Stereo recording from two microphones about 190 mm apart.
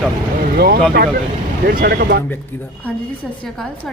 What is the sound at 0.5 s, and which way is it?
Speech, 55° right (ahead or behind).